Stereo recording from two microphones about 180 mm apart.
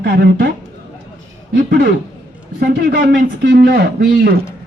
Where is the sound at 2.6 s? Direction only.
55° right (ahead or behind).